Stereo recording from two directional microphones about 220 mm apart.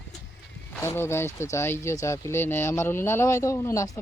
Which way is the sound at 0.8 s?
10° left (ahead or behind).